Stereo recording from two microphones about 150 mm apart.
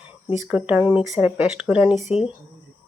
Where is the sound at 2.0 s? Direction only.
45° left (ahead or behind).